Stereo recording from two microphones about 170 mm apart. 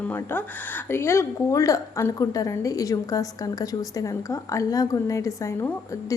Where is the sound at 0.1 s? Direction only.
10° left (ahead or behind).